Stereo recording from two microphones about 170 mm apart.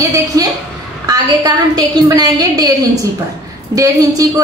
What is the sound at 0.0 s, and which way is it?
A woman's voice, 20° right (ahead or behind).